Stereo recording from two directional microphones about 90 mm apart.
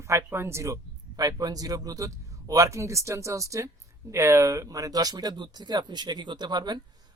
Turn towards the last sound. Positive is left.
turn(degrees=-55)  # may be behind; listen again after turning